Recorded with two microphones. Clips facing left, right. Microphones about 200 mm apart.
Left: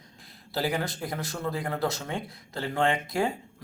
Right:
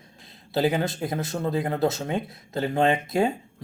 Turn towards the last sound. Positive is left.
turn(degrees=-25)  # may be behind; listen again after turning